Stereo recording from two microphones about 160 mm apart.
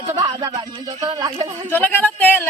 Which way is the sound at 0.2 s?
25° right (ahead or behind).